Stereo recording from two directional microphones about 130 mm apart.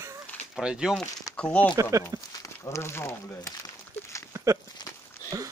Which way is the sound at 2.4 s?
20° left (ahead or behind).